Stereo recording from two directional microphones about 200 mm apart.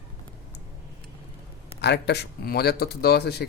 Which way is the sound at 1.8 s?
55° left (ahead or behind).